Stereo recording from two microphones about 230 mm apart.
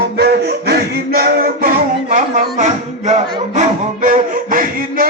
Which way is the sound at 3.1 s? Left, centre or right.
Right.